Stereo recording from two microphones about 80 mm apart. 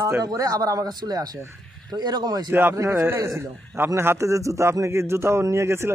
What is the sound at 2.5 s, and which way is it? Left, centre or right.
A man's voice, right.